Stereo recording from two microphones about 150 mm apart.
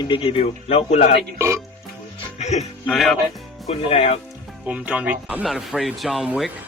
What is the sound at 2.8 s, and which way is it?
Speech, centre (ahead or behind).